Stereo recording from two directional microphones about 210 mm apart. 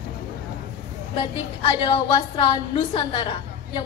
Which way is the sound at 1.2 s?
25° left (ahead or behind).